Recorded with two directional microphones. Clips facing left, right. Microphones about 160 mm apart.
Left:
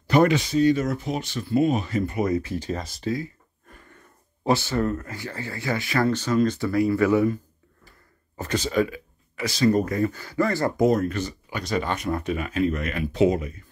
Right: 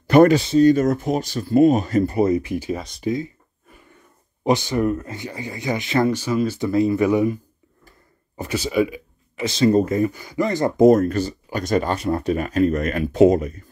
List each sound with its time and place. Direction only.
0.0 s a sound: 55° right (ahead or behind)
0.3 s speech: 35° right (ahead or behind)
0.7 s speech: 45° right (ahead or behind)
2.3 s speech: 15° right (ahead or behind)
4.4 s speech: 15° right (ahead or behind)
6.1 s speech: 10° right (ahead or behind)
6.7 s speech: 20° right (ahead or behind)
8.4 s speech: 10° right (ahead or behind)
10.9 s speech: 45° right (ahead or behind)
11.9 s speech: 35° right (ahead or behind)